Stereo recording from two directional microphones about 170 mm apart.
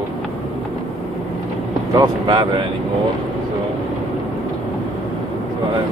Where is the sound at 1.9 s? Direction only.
25° right (ahead or behind).